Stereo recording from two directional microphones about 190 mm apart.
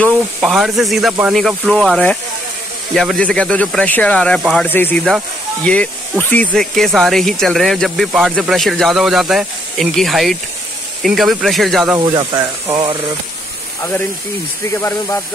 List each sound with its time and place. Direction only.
0.4 s speech: centre (ahead or behind)
12.0 s speech: 25° right (ahead or behind)
14.7 s speech: 15° left (ahead or behind)